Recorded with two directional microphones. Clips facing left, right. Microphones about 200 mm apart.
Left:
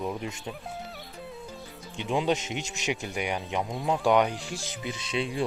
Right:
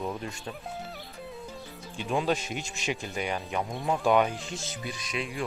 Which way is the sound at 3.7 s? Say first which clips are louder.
Left 1 dB; centre (ahead or behind).